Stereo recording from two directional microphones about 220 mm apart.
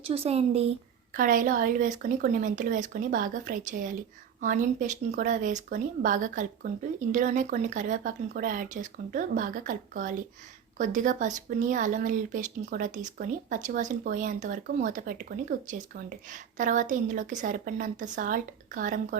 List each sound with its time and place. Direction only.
0.0 s speech: 25° right (ahead or behind)
1.1 s speech: 40° right (ahead or behind)